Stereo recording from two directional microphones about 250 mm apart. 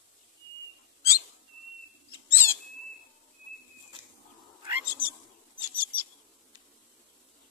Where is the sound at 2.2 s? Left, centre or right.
Centre.